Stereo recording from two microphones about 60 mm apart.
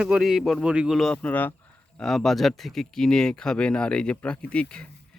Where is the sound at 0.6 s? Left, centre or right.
Centre.